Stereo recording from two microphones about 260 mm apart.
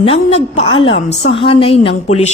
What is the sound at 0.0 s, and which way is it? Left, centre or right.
Speech, left.